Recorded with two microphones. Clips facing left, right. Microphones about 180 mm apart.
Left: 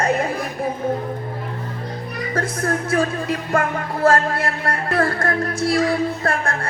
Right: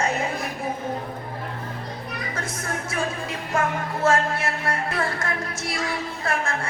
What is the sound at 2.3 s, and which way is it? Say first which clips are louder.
Speech: left 11 dB; 60° left (ahead or behind).